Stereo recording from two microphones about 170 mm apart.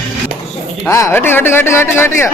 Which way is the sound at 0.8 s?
15° left (ahead or behind).